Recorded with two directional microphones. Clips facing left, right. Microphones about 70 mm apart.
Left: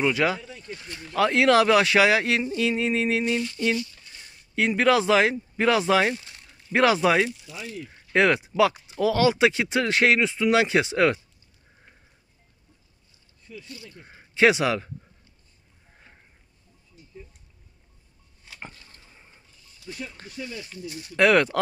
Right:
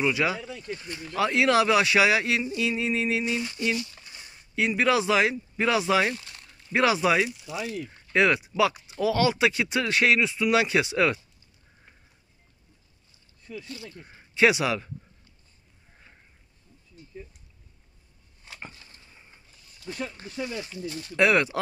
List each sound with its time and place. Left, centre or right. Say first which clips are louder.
0.0 s speech: left 2 dB; left
0.6 s speech: right 3 dB; centre
1.1 s speech: left 3 dB; left
4.6 s speech: left 3 dB; left
6.1 s a sound: left 2 dB; centre
6.7 s speech: left 3 dB; left
13.6 s speech: right 3 dB; right
13.9 s speech: left 3 dB; left
18.6 s a sound: left 2 dB; left
20.3 s speech: right 3 dB; right
21.2 s speech: left 3 dB; left